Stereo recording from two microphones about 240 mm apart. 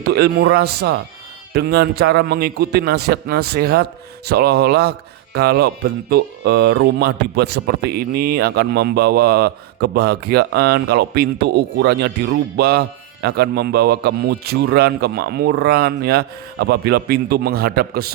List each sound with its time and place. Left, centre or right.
0.0 s a man's voice: right